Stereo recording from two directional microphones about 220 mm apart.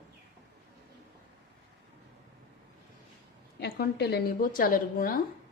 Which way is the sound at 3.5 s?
45° left (ahead or behind).